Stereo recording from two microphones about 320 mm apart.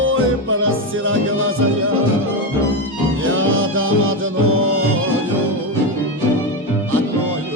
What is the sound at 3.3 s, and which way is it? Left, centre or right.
Music, right.